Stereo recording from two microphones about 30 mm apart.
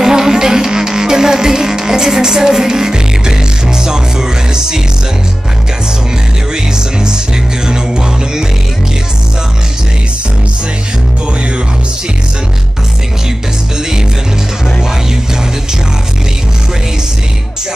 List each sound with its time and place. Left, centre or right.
0.0 s music: centre
6.5 s music: right